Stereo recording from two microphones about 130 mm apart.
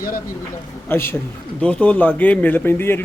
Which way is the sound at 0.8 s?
15° left (ahead or behind).